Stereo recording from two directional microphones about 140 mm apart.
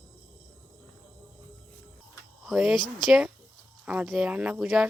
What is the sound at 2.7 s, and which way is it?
Speech, 35° left (ahead or behind).